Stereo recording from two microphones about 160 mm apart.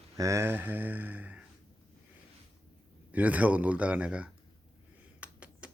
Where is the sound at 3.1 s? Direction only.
10° right (ahead or behind).